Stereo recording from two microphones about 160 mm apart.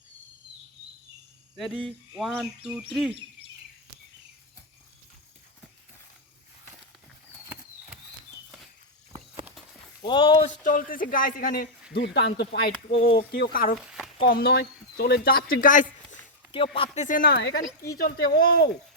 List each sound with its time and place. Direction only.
1.5 s cricket: centre (ahead or behind)
10.0 s speech: 30° left (ahead or behind)
10.5 s a man's voice: 55° left (ahead or behind)
14.3 s speech: 70° left (ahead or behind); by 15.9 s 55° left (ahead or behind)
16.7 s a man's voice: 40° left (ahead or behind); by 18.7 s 70° left (ahead or behind)